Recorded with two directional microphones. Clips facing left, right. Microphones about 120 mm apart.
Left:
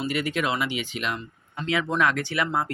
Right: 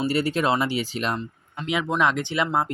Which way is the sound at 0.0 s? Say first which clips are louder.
Right 4 dB; 35° right (ahead or behind).